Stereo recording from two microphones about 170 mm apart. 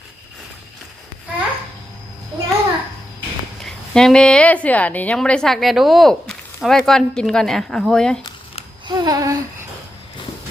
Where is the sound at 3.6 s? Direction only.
5° left (ahead or behind).